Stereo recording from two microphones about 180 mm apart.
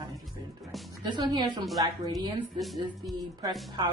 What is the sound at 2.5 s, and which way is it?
Speech, centre (ahead or behind).